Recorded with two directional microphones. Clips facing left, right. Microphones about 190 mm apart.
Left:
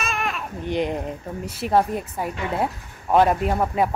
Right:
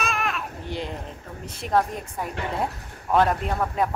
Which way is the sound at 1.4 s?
5° left (ahead or behind).